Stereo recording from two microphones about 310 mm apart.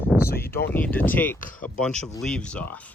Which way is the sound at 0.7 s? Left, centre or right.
Centre.